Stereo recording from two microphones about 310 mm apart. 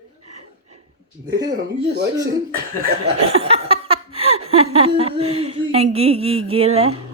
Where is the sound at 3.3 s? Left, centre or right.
Centre.